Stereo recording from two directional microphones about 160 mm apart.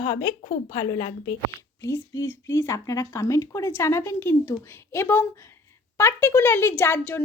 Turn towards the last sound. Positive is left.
turn(degrees=15)  # may be behind; listen again after turning